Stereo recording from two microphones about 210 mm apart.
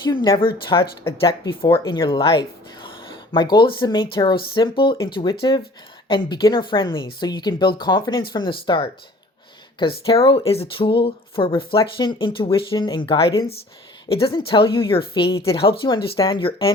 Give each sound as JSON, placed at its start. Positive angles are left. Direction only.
{"t": 0.1, "sound": "speech", "side_deg": 20}
{"t": 10.1, "sound": "speech", "side_deg": 25}